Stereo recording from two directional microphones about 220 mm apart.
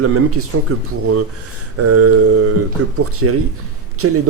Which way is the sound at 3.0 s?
90° right.